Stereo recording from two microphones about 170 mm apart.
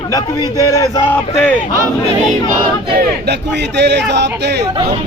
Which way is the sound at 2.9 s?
80° right.